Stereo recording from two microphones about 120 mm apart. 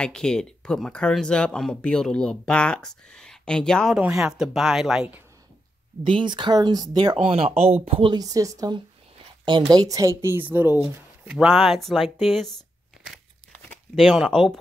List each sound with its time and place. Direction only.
0.0 s speech: 5° left (ahead or behind)
6.0 s speech: 45° right (ahead or behind)
7.2 s speech: 55° right (ahead or behind)
8.1 s speech: 30° right (ahead or behind); by 12.5 s centre (ahead or behind)
13.9 s speech: centre (ahead or behind)